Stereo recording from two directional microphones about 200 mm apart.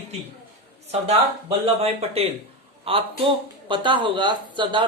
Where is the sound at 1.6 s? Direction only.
30° right (ahead or behind).